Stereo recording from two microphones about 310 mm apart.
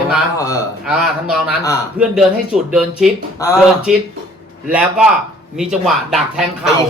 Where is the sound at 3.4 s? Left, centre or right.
Centre.